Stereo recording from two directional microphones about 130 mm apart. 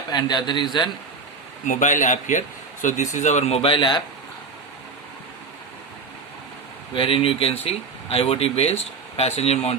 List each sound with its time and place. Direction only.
0.1 s a man's voice: 35° left (ahead or behind)
1.6 s a man's voice: 80° left; by 4.0 s 40° left (ahead or behind)
6.9 s speech: 40° left (ahead or behind)